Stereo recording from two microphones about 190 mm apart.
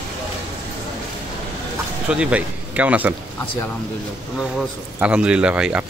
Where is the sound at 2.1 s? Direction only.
5° right (ahead or behind).